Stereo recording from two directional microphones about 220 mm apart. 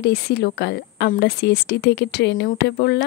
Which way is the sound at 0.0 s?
50° left (ahead or behind).